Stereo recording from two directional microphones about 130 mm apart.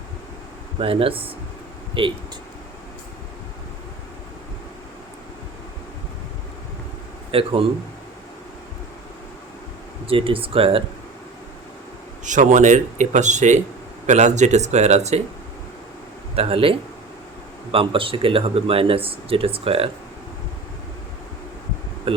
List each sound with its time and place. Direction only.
0.8 s speech: 45° right (ahead or behind)
7.3 s speech: 45° right (ahead or behind)
10.1 s speech: 45° right (ahead or behind)
12.2 s speech: 75° right (ahead or behind); by 15.2 s 60° right (ahead or behind)
16.3 s speech: 50° right (ahead or behind)
22.1 s bee: 45° right (ahead or behind)